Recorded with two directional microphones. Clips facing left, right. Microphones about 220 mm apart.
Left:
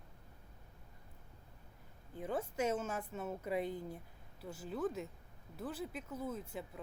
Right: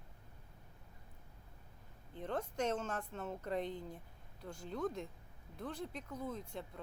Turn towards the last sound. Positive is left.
turn(degrees=5)  # may be behind; listen again after turning